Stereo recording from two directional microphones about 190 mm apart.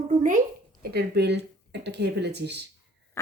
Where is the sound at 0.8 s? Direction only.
55° right (ahead or behind).